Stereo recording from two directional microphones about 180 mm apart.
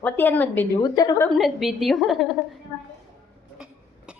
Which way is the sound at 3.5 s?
5° right (ahead or behind).